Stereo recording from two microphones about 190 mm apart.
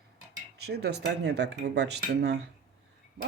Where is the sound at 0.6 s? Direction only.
60° right (ahead or behind).